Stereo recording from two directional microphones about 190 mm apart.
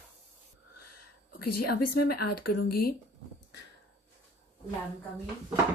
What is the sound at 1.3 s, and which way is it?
Speech, 55° left (ahead or behind).